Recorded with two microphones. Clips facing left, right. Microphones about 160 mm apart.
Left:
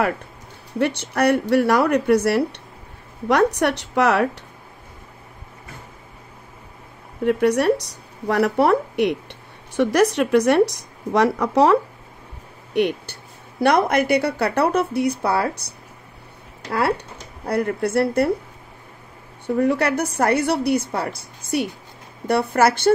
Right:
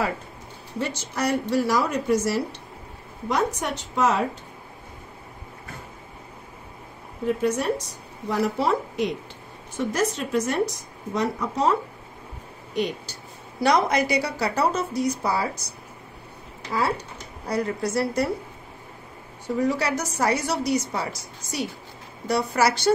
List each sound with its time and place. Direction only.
0.7 s a woman's voice: 65° left (ahead or behind)
7.2 s a woman's voice: 70° left (ahead or behind)
12.7 s speech: 60° left (ahead or behind)
16.6 s speech: 65° left (ahead or behind)
19.4 s speech: 60° left (ahead or behind)